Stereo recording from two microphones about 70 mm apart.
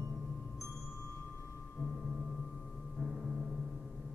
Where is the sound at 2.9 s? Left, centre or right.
Centre.